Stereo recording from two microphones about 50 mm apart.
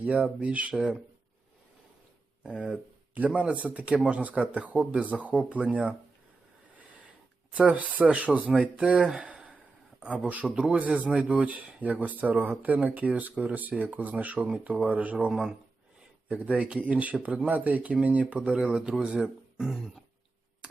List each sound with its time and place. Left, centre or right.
0.0 s speech: right
2.4 s speech: right
7.5 s speech: right
8.3 s speech: centre
9.2 s a sound: right
10.2 s speech: right
15.3 s speech: centre
16.3 s speech: right; by 19.9 s centre